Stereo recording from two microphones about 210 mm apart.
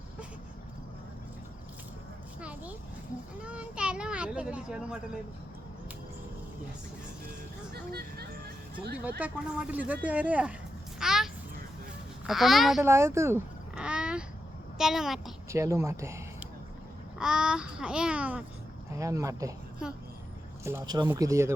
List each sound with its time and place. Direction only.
2.4 s a sound: 5° right (ahead or behind)
8.7 s speech: 45° right (ahead or behind)
9.0 s speech: 5° right (ahead or behind)
11.0 s a sound: centre (ahead or behind)
12.2 s a child's voice: centre (ahead or behind)
12.8 s a child's voice: 15° right (ahead or behind)
15.4 s a child's voice: 15° right (ahead or behind)
20.7 s speech: 15° right (ahead or behind)